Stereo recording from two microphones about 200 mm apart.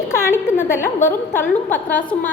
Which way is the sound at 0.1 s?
10° left (ahead or behind).